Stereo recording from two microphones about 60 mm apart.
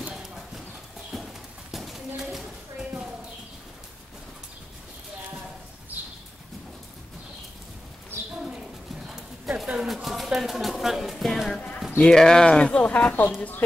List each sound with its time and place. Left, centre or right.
1.1 s clip-clop: centre
1.7 s a sound: centre
9.0 s clip-clop: centre
10.0 s speech: centre; by 13.3 s left